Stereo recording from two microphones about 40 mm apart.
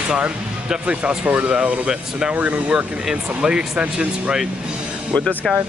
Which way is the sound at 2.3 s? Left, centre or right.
Right.